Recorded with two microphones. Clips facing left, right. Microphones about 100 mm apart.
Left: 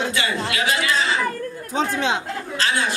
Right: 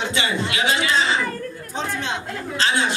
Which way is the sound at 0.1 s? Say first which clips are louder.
Even; 25° right (ahead or behind).